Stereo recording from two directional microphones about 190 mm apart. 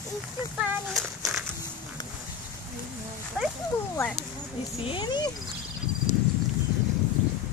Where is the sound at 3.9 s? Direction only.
5° left (ahead or behind).